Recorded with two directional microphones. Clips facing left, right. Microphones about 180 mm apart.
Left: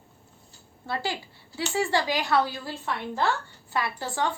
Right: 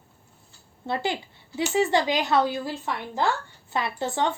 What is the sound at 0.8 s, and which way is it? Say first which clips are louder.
A woman's voice: right 3 dB; 20° right (ahead or behind).